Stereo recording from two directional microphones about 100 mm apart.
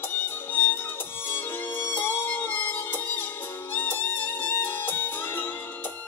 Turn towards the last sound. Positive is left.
turn(degrees=20)  # may be behind; listen again after turning